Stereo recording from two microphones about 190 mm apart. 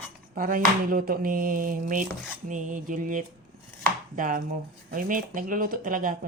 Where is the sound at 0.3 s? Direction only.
45° right (ahead or behind).